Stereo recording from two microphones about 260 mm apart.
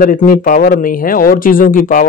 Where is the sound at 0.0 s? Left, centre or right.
Left.